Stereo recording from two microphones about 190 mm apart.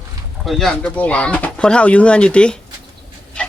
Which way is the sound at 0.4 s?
5° left (ahead or behind).